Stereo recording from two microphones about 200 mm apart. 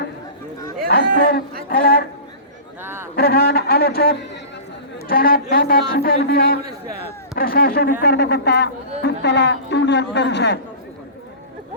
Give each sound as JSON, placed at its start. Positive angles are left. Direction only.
{"t": 0.9, "sound": "a man's voice", "side_deg": 50}
{"t": 2.8, "sound": "a man's voice", "side_deg": -10}
{"t": 3.2, "sound": "a man's voice", "side_deg": 50}